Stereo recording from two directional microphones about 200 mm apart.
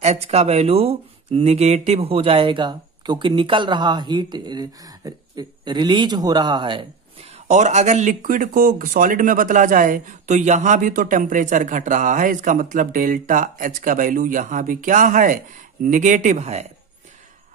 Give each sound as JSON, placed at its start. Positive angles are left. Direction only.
{"t": 0.0, "sound": "speech", "side_deg": -30}
{"t": 7.4, "sound": "speech", "side_deg": -35}